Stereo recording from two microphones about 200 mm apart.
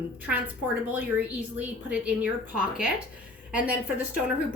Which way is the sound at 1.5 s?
5° right (ahead or behind).